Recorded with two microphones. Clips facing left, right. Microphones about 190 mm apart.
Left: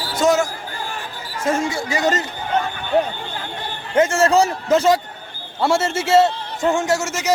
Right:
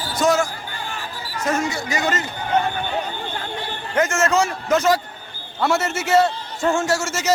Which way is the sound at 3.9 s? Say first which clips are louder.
Left 4 dB; 30° left (ahead or behind).